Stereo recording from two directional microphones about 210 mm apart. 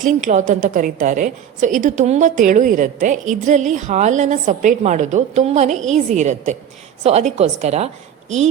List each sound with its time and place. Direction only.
0.0 s a woman's voice: 35° right (ahead or behind)